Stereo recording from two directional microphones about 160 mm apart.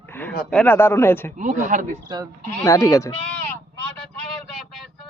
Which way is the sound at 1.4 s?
50° right (ahead or behind).